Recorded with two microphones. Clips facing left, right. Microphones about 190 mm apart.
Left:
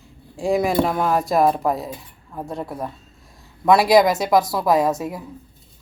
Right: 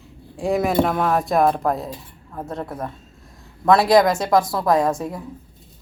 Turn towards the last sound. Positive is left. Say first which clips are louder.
# even
turn(degrees=0)  # may be behind; listen again after turning